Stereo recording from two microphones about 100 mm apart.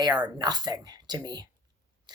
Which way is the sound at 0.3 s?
45° right (ahead or behind).